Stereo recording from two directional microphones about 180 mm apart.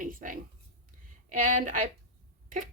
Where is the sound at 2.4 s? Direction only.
45° right (ahead or behind).